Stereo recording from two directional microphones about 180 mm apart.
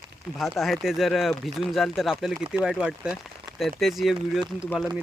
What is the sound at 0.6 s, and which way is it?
Speech, centre (ahead or behind).